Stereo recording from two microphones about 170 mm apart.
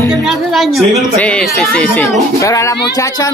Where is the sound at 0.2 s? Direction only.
Centre (ahead or behind).